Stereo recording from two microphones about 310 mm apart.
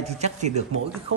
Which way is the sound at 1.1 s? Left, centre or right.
Right.